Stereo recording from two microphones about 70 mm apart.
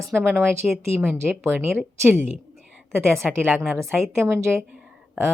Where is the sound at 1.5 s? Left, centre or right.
Centre.